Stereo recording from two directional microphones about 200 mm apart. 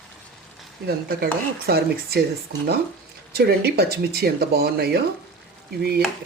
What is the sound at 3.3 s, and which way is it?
A woman's voice, 50° right (ahead or behind).